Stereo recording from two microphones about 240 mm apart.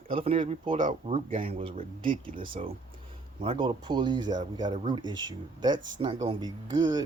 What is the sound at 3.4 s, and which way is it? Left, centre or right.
Speech, right.